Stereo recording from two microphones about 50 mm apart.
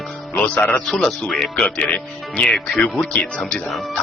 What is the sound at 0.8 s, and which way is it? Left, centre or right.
Speech, centre.